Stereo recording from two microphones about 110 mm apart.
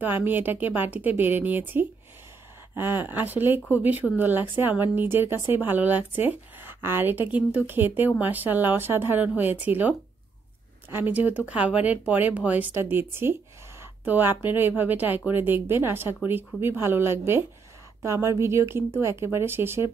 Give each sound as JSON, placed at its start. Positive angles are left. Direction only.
{"t": 0.0, "sound": "speech", "side_deg": -15}